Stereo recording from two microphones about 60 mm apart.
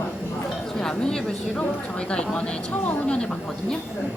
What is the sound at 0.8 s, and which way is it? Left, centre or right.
Speech, centre.